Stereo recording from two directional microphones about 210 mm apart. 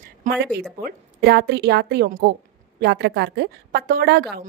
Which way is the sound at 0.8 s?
50° right (ahead or behind).